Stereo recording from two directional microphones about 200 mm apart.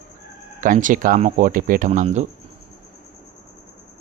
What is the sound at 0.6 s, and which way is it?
Speech, 40° right (ahead or behind).